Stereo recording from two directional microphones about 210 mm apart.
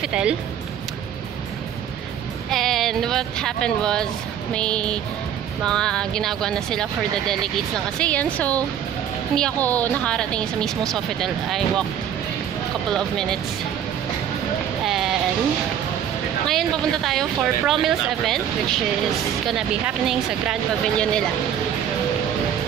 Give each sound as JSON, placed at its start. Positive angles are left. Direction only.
{"t": 0.0, "sound": "speech", "side_deg": -5}
{"t": 2.5, "sound": "speech", "side_deg": 0}
{"t": 12.9, "sound": "speech", "side_deg": 0}
{"t": 14.9, "sound": "speech", "side_deg": 0}
{"t": 16.4, "sound": "speech", "side_deg": 0}